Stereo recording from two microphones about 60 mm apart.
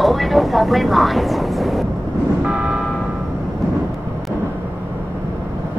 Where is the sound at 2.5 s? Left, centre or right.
Centre.